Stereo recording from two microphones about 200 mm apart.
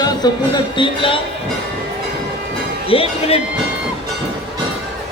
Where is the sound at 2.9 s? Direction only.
30° left (ahead or behind).